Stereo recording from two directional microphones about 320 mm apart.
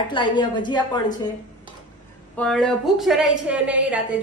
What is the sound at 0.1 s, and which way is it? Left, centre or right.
A woman's voice, centre.